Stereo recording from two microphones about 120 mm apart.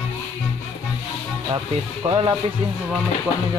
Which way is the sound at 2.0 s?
45° right (ahead or behind).